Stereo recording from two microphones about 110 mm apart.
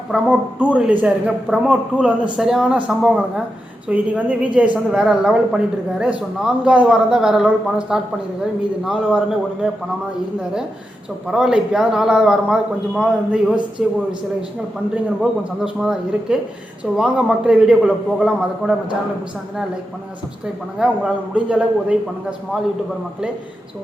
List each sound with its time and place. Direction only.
0.1 s a man's voice: 10° right (ahead or behind)
11.3 s a man's voice: 5° right (ahead or behind)
15.2 s a man's voice: 5° right (ahead or behind)
20.7 s a man's voice: 10° right (ahead or behind)